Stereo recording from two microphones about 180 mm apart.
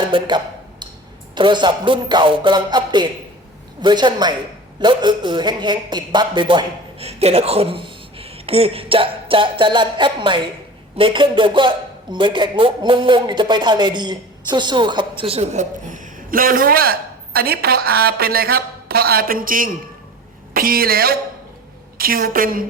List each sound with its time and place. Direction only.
0.1 s a sound: 25° right (ahead or behind)
1.4 s a man's voice: 25° right (ahead or behind)
15.2 s a woman's voice: 35° right (ahead or behind)